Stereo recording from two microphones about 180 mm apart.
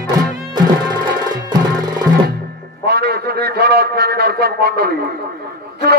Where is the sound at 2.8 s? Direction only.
65° right (ahead or behind).